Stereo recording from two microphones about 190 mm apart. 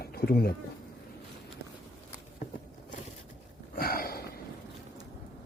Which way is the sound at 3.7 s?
50° left (ahead or behind).